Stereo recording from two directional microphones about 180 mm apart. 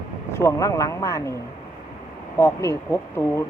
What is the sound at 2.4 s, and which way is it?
Speech, 15° left (ahead or behind).